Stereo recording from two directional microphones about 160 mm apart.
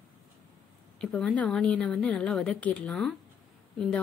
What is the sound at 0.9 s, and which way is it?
A woman's voice, 5° left (ahead or behind).